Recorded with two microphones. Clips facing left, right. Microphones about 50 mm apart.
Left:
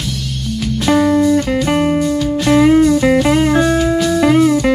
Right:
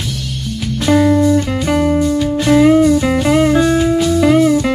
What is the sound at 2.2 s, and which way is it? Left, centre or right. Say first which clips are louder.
Music: right 1 dB; centre.